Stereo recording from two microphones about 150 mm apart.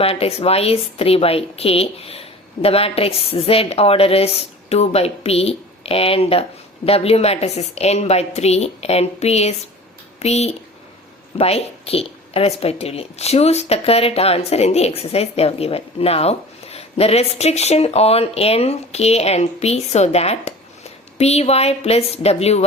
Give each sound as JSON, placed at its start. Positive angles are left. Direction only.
{"t": 0.0, "sound": "a woman's voice", "side_deg": 40}